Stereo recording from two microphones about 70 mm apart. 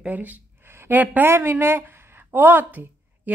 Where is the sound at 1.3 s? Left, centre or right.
Right.